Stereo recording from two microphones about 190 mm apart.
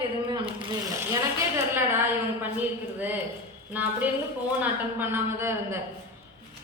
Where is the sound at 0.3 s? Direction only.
20° right (ahead or behind).